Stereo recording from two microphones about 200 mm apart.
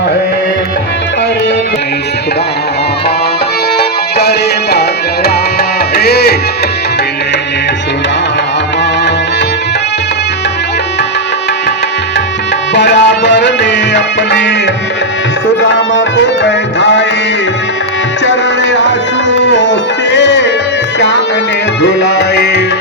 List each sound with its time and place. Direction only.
3.8 s music: 55° left (ahead or behind)
6.0 s music: 55° left (ahead or behind)
12.7 s music: 60° left (ahead or behind)
15.7 s music: 65° left (ahead or behind)
18.3 s music: 60° left (ahead or behind)
21.8 s music: 60° left (ahead or behind)